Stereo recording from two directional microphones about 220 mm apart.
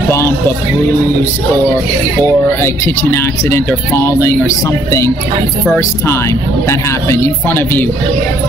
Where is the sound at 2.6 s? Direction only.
10° left (ahead or behind).